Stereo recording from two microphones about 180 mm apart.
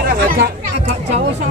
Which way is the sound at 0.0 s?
55° right (ahead or behind).